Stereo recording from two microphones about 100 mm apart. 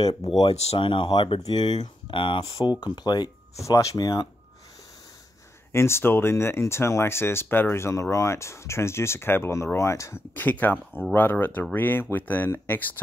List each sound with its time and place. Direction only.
0.7 s speech: 55° left (ahead or behind)
2.8 s speech: 45° left (ahead or behind)
3.5 s speech: 30° left (ahead or behind)
5.7 s speech: 25° left (ahead or behind)
10.3 s speech: 20° left (ahead or behind)